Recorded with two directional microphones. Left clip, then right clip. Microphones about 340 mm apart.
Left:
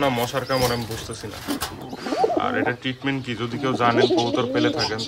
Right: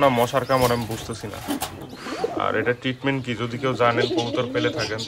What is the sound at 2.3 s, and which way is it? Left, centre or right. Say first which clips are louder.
Speech: even; centre.